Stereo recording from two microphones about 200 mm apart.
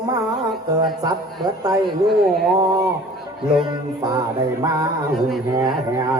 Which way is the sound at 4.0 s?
20° right (ahead or behind).